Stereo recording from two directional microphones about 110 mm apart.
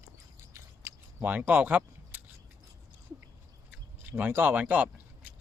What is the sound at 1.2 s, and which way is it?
Speech, 15° right (ahead or behind).